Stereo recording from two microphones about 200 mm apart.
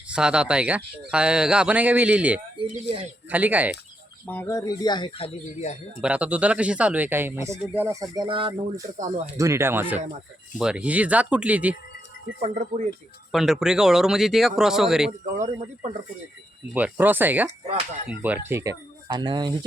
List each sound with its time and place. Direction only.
0.1 s speech: 5° right (ahead or behind)
2.6 s speech: 30° right (ahead or behind)
3.2 s speech: 10° right (ahead or behind)
4.3 s speech: 10° left (ahead or behind); by 5.7 s 30° left (ahead or behind)
6.0 s speech: 5° right (ahead or behind); by 8.8 s 25° right (ahead or behind)
9.2 s speech: 15° right (ahead or behind)
12.4 s speech: 35° right (ahead or behind)
13.3 s speech: centre (ahead or behind)
16.7 s speech: 10° right (ahead or behind)